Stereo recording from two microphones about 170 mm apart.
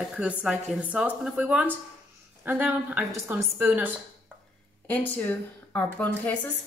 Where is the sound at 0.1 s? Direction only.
5° right (ahead or behind).